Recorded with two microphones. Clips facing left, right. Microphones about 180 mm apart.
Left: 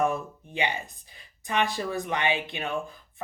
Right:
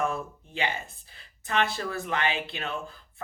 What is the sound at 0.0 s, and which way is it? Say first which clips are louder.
Speech: left 3 dB; 15° left (ahead or behind).